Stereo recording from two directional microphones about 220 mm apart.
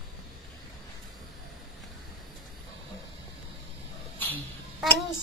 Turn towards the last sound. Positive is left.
turn(degrees=10)  # may be behind; listen again after turning